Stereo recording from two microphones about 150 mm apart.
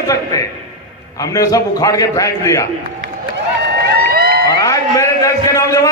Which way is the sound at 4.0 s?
90° right.